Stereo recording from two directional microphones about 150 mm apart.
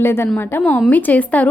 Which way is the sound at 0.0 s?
15° left (ahead or behind).